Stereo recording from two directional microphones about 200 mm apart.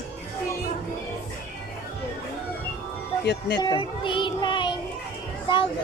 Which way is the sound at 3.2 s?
55° left (ahead or behind).